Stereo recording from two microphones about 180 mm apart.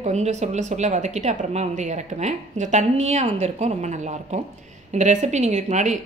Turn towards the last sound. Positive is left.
turn(degrees=-40)  # may be behind; listen again after turning